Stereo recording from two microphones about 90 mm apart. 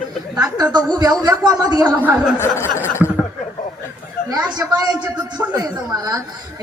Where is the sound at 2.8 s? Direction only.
30° left (ahead or behind).